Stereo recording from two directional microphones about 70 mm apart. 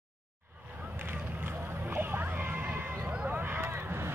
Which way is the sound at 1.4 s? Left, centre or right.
Right.